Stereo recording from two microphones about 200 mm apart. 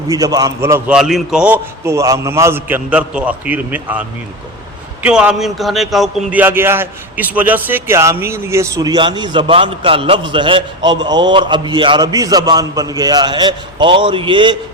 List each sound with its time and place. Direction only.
0.1 s a man's voice: 20° right (ahead or behind)
5.0 s speech: 5° right (ahead or behind); by 14.5 s 25° right (ahead or behind)